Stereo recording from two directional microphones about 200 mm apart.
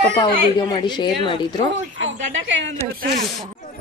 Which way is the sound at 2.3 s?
65° right (ahead or behind).